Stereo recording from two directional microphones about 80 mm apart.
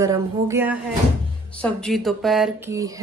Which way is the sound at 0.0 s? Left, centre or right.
Right.